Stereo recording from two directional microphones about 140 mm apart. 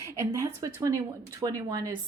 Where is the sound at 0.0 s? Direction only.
20° right (ahead or behind).